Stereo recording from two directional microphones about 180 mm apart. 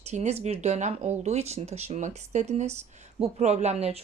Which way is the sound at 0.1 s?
35° right (ahead or behind).